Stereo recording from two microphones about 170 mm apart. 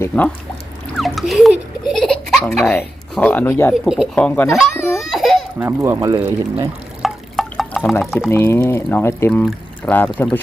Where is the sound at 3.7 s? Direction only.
5° right (ahead or behind).